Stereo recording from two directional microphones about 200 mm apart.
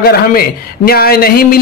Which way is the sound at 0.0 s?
50° left (ahead or behind).